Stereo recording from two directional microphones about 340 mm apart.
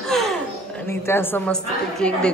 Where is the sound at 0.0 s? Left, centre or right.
Centre.